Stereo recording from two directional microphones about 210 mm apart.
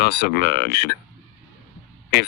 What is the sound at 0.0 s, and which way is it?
Speech, 50° left (ahead or behind).